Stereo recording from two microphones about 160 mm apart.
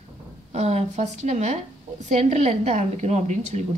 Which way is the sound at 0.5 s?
45° right (ahead or behind).